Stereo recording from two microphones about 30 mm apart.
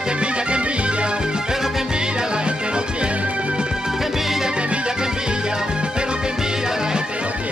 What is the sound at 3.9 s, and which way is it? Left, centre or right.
Music, centre.